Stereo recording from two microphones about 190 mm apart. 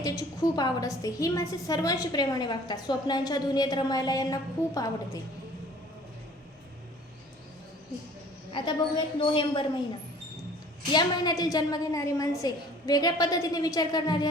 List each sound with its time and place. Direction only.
0.0 s a woman's voice: 20° left (ahead or behind)
8.5 s a woman's voice: 25° left (ahead or behind)
10.9 s a woman's voice: 20° left (ahead or behind)